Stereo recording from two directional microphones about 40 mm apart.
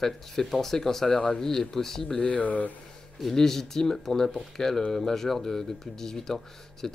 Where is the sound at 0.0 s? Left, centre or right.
Centre.